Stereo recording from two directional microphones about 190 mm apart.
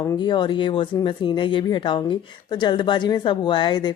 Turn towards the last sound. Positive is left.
turn(degrees=25)  # may be behind; listen again after turning